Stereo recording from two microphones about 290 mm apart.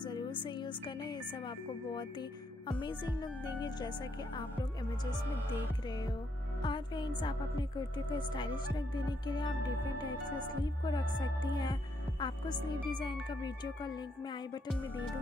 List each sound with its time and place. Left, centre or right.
0.0 s speech: centre
2.8 s a woman's voice: centre
6.6 s a woman's voice: centre
10.6 s a woman's voice: centre